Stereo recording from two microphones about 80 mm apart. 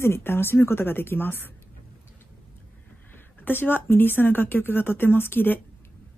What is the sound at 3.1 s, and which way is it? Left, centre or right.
Speech, left.